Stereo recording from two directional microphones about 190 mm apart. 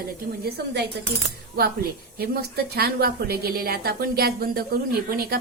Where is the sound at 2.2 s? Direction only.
55° right (ahead or behind).